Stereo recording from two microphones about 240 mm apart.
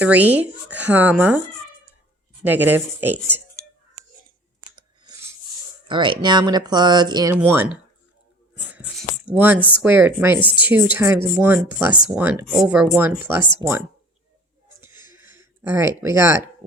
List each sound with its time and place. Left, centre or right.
0.0 s speech: centre
2.4 s speech: centre
4.7 s chewing: centre
5.9 s speech: centre
8.7 s a sound: centre
9.2 s speech: centre
14.8 s a sound: centre
16.0 s speech: centre